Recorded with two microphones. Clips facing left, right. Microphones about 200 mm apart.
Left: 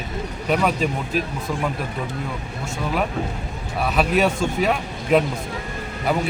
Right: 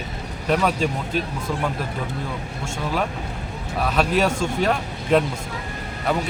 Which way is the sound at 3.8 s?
5° left (ahead or behind).